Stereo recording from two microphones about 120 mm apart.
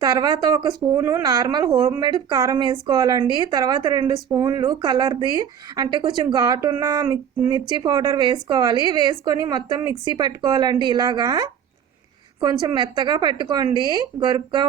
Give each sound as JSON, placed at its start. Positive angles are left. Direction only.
{"t": 0.0, "sound": "a woman's voice", "side_deg": -35}
{"t": 0.9, "sound": "a woman's voice", "side_deg": -25}
{"t": 7.5, "sound": "a woman's voice", "side_deg": -40}